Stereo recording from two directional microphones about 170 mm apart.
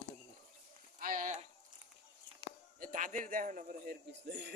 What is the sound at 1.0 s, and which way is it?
Speech, 50° right (ahead or behind).